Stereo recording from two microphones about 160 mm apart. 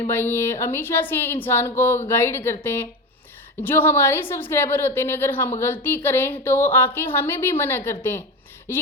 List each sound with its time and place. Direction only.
0.1 s a woman's voice: 15° left (ahead or behind)